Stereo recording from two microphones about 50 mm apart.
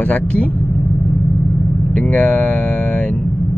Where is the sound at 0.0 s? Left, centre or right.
Left.